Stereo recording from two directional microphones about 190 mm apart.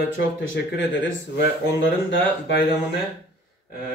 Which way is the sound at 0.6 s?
60° left (ahead or behind).